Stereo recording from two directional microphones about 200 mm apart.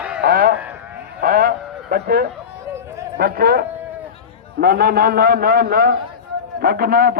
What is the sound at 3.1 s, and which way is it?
Speech, 50° right (ahead or behind).